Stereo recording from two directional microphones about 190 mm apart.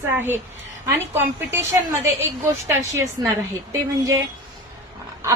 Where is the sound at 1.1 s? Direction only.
10° right (ahead or behind).